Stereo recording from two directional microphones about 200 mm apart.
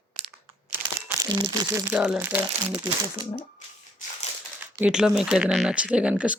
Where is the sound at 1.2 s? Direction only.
15° right (ahead or behind).